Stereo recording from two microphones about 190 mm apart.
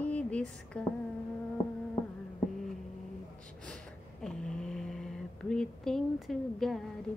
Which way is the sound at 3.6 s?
5° left (ahead or behind).